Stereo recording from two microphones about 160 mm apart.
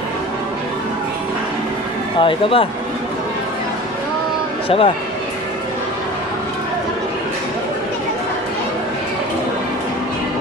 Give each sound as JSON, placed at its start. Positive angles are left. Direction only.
{"t": 2.1, "sound": "speech", "side_deg": 35}
{"t": 4.6, "sound": "speech", "side_deg": 35}